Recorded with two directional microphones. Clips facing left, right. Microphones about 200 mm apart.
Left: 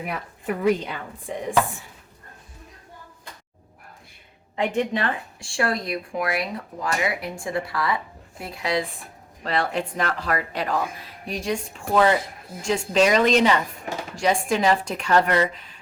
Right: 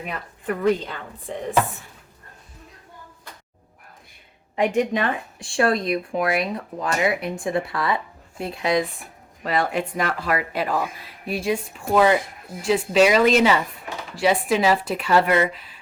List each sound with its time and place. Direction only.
0.0 s speech: 10° left (ahead or behind)
4.5 s speech: 15° right (ahead or behind)
9.4 s speech: 10° right (ahead or behind)